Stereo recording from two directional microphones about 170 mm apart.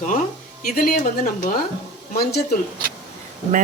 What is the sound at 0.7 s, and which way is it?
Speech, 55° left (ahead or behind).